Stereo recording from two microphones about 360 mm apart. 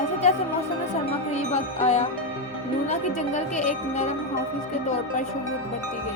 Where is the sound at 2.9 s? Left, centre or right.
Centre.